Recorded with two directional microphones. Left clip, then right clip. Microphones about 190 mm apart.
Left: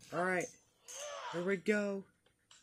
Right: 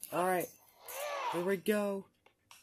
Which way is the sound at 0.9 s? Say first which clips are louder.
Right 6 dB; 10° right (ahead or behind).